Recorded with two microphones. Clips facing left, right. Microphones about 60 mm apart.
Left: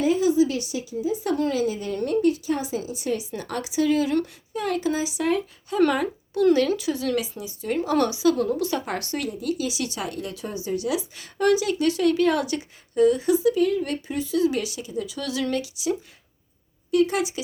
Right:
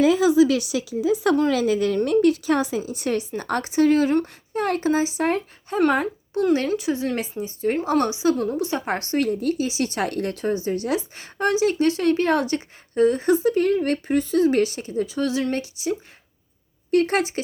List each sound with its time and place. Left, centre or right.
0.0 s speech: right
7.2 s a woman's voice: right
7.9 s a woman's voice: right
16.9 s speech: right